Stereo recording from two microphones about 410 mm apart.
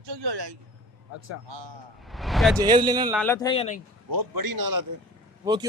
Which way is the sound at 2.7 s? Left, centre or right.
Centre.